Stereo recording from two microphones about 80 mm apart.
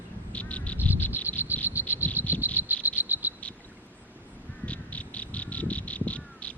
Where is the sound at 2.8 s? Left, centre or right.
Right.